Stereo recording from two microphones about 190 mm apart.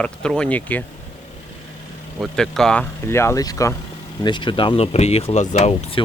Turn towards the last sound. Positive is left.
turn(degrees=30)  # may be behind; listen again after turning